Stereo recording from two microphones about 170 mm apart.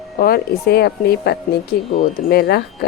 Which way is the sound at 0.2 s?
65° left (ahead or behind).